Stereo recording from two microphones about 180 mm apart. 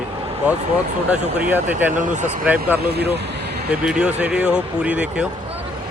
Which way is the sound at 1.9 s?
45° right (ahead or behind).